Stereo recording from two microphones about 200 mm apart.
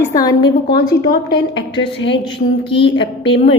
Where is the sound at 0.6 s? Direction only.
50° left (ahead or behind).